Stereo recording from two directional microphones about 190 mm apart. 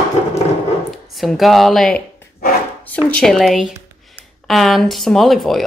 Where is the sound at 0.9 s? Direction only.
Centre (ahead or behind).